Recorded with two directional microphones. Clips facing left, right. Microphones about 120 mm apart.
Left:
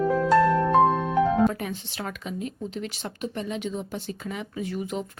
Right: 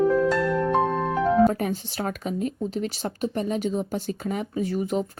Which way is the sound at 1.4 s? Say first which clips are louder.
Right 3 dB; 40° right (ahead or behind).